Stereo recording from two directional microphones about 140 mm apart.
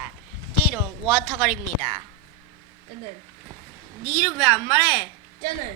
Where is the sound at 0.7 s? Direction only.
10° right (ahead or behind).